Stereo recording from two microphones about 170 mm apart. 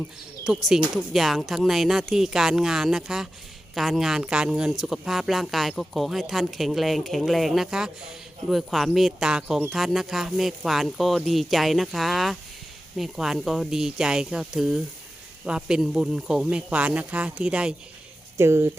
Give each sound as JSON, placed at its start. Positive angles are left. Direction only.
{"t": 0.4, "sound": "speech", "side_deg": -5}